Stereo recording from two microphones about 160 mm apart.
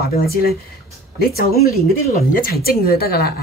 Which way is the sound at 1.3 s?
70° left (ahead or behind).